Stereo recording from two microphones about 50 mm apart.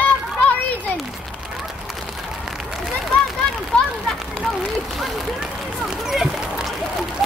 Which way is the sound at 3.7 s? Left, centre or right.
Centre.